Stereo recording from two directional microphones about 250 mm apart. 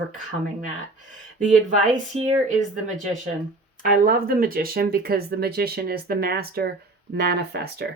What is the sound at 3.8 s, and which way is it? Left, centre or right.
Speech, right.